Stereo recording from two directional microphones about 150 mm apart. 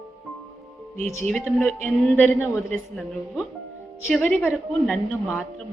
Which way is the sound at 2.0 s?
15° left (ahead or behind).